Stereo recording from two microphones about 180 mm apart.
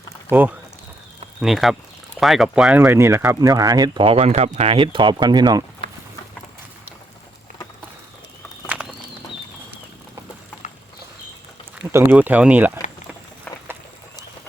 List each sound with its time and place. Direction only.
0.3 s speech: 10° right (ahead or behind)
8.6 s bird: 10° right (ahead or behind)
11.9 s speech: 15° right (ahead or behind)